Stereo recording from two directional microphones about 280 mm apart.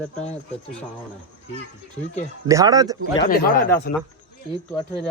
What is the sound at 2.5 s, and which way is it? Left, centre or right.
Speech, centre.